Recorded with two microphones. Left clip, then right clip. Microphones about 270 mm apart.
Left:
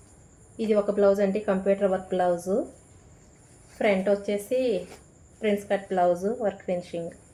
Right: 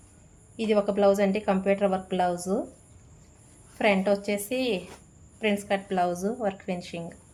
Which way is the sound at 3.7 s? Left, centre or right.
Right.